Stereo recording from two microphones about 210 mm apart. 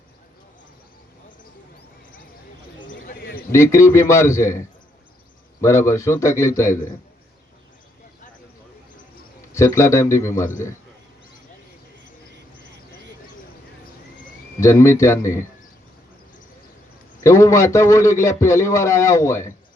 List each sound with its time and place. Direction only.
2.9 s a sound: 45° left (ahead or behind)
3.5 s a man's voice: 15° left (ahead or behind)
9.5 s a man's voice: 15° left (ahead or behind)
14.6 s a man's voice: 15° left (ahead or behind)
17.2 s a man's voice: 15° left (ahead or behind)